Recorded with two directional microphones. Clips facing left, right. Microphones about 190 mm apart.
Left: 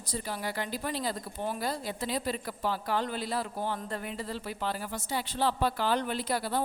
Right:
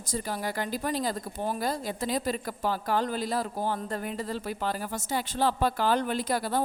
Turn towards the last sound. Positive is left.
turn(degrees=-45)  # may be behind; listen again after turning